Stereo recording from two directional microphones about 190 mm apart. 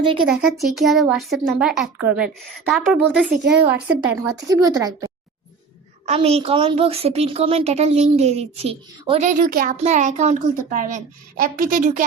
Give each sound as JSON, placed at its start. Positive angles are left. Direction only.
{"t": 0.3, "sound": "a woman's voice", "side_deg": -5}
{"t": 6.1, "sound": "a woman's voice", "side_deg": -30}
{"t": 9.7, "sound": "a woman's voice", "side_deg": -35}